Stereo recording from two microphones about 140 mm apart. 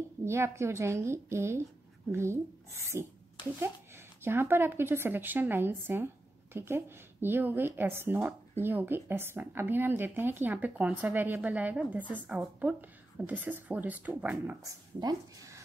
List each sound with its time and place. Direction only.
0.2 s a woman's voice: 20° right (ahead or behind)
14.6 s speech: 25° right (ahead or behind)